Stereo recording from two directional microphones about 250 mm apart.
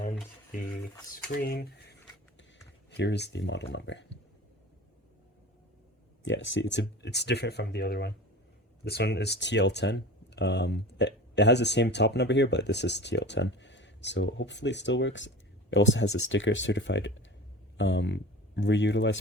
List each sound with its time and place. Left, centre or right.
1.4 s speech: left
2.9 s speech: left
6.2 s speech: left